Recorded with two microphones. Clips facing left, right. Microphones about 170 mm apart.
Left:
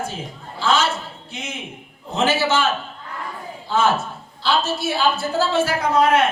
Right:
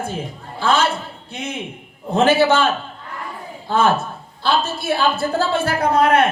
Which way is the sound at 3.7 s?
55° right (ahead or behind).